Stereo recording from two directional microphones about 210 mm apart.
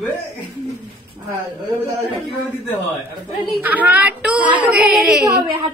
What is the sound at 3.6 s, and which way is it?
A woman's voice, 10° right (ahead or behind).